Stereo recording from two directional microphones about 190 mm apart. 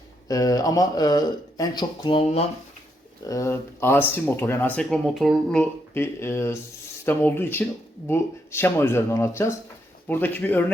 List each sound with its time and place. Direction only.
0.3 s speech: 20° left (ahead or behind)
3.2 s speech: 15° left (ahead or behind)